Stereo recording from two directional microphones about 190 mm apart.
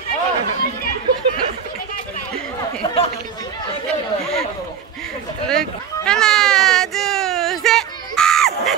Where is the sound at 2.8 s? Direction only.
30° left (ahead or behind).